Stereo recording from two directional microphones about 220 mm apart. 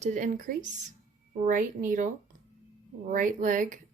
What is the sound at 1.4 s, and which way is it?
Speech, 35° right (ahead or behind).